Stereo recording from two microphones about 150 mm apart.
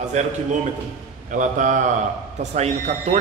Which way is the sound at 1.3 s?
60° right (ahead or behind).